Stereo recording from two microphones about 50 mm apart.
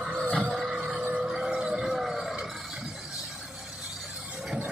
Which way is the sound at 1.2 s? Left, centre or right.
Centre.